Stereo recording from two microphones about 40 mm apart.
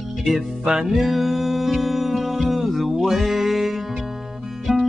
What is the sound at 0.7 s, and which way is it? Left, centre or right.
Music, centre.